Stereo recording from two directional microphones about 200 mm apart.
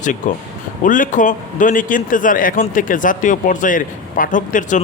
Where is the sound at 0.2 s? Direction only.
40° left (ahead or behind).